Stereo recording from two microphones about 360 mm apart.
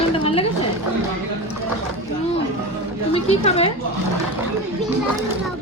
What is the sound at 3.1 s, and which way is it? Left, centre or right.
Speech, centre.